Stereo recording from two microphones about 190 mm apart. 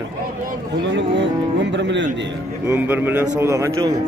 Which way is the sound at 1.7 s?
70° right (ahead or behind).